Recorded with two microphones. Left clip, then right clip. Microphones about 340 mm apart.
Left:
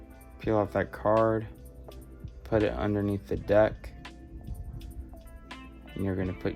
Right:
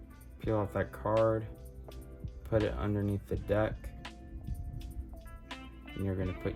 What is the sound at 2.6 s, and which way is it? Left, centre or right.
Speech, left.